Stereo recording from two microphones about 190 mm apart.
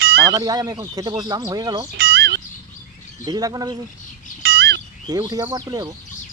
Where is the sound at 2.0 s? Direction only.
60° right (ahead or behind).